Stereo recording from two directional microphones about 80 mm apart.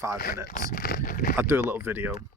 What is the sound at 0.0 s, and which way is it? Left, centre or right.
Speech, right.